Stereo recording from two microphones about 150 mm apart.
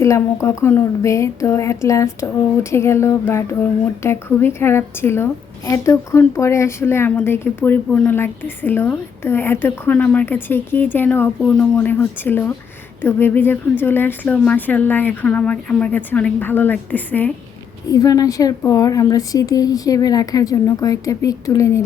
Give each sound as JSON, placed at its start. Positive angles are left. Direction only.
{"t": 0.4, "sound": "speech", "side_deg": 15}
{"t": 17.9, "sound": "speech", "side_deg": 25}